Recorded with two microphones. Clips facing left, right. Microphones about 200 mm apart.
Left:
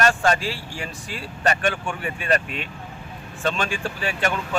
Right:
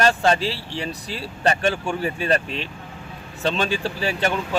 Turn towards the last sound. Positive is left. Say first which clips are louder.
# right 2 dB
turn(degrees=-30)  # may be behind; listen again after turning